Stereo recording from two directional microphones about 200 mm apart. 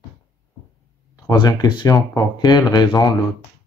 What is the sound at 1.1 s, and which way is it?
Speech, 20° left (ahead or behind).